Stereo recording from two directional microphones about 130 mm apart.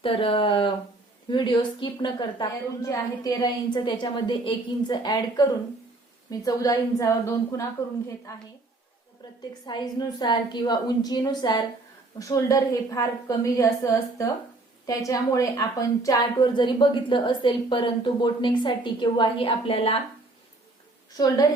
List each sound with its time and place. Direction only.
0.0 s a woman's voice: 45° left (ahead or behind); by 8.4 s 25° left (ahead or behind)
9.6 s a woman's voice: 30° left (ahead or behind); by 20.0 s 45° left (ahead or behind)
21.1 s a woman's voice: 30° left (ahead or behind)